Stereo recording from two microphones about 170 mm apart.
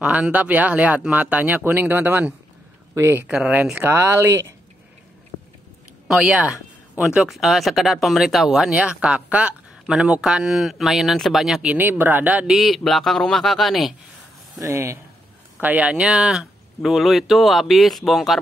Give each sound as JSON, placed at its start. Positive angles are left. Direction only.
{"t": 0.0, "sound": "speech", "side_deg": -10}
{"t": 6.0, "sound": "speech", "side_deg": -5}
{"t": 14.6, "sound": "speech", "side_deg": -15}